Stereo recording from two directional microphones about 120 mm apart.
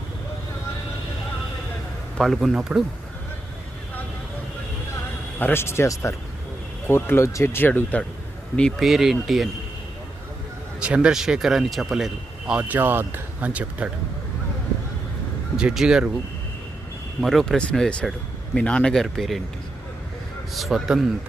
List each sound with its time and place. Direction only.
2.1 s speech: centre (ahead or behind)
5.4 s speech: 20° left (ahead or behind); by 9.5 s centre (ahead or behind)
10.8 s speech: 10° right (ahead or behind)
15.5 s speech: 5° right (ahead or behind)
17.2 s speech: centre (ahead or behind)
20.5 s speech: centre (ahead or behind)